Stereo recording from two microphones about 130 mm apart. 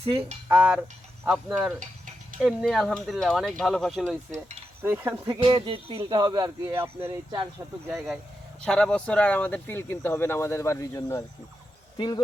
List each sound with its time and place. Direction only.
0.0 s speech: 50° right (ahead or behind)
0.4 s a sound: 10° right (ahead or behind)
1.3 s speech: 5° right (ahead or behind)
4.3 s cutlery: 60° right (ahead or behind)
4.8 s cutlery: 15° right (ahead or behind)
5.4 s speech: 40° right (ahead or behind)
6.1 s speech: 30° right (ahead or behind)
6.7 s speech: 20° right (ahead or behind)
7.6 s speech: 30° right (ahead or behind)
7.9 s speech: centre (ahead or behind); by 11.2 s 20° left (ahead or behind)
11.9 s speech: 35° left (ahead or behind)